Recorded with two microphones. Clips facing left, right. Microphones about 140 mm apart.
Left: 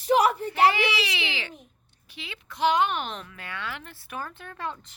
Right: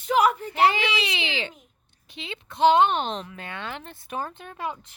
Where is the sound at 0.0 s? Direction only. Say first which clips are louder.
Even; 35° left (ahead or behind).